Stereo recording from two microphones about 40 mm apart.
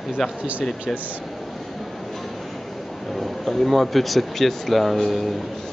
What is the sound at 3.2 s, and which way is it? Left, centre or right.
Speech, centre.